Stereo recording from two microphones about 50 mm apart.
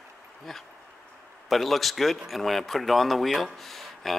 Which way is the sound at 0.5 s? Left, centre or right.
Centre.